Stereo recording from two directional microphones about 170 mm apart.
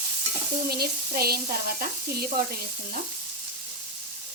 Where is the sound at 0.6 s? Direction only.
65° right (ahead or behind).